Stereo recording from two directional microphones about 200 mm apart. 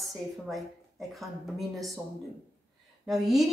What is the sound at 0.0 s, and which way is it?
A woman's voice, centre (ahead or behind).